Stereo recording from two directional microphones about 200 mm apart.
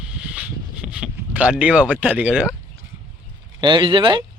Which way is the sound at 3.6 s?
25° right (ahead or behind).